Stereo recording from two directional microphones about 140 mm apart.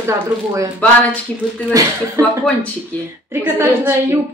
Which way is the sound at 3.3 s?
20° right (ahead or behind).